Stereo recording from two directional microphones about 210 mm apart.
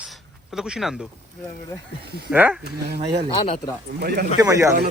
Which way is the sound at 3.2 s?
25° left (ahead or behind).